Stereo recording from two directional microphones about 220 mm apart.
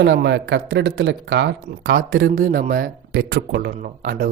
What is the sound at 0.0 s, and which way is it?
Speech, 50° right (ahead or behind).